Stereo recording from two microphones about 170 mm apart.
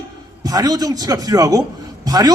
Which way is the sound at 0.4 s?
20° right (ahead or behind).